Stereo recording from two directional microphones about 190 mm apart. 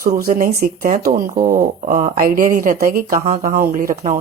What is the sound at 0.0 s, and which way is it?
Speech, 50° right (ahead or behind).